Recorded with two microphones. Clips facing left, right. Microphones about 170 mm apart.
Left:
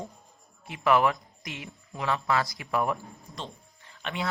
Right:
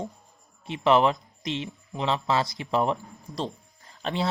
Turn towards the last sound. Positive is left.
turn(degrees=-35)  # may be behind; listen again after turning